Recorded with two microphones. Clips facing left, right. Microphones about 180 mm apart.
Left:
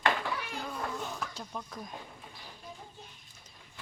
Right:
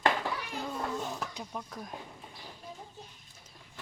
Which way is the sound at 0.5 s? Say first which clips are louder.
Right 2 dB; 20° right (ahead or behind).